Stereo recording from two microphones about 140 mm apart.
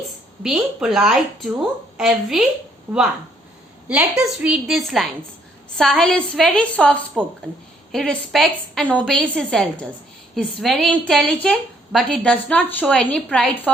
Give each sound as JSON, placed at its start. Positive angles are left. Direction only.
{"t": 0.4, "sound": "a woman's voice", "side_deg": -5}
{"t": 2.9, "sound": "speech", "side_deg": -20}
{"t": 3.8, "sound": "a woman's voice", "side_deg": -10}